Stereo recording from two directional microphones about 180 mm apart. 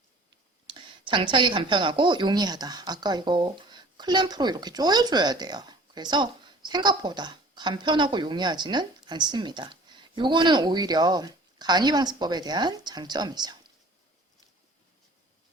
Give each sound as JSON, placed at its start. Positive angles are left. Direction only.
{"t": 0.7, "sound": "speech", "side_deg": -25}